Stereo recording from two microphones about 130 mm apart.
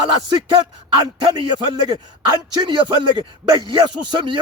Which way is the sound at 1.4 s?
35° right (ahead or behind).